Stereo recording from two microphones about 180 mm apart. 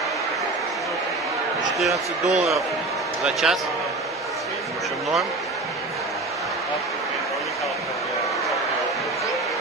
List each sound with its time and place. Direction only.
2.2 s speech: 40° right (ahead or behind)
3.3 s speech: 5° right (ahead or behind)